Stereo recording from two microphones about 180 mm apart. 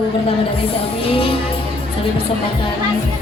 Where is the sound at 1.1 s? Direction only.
30° left (ahead or behind).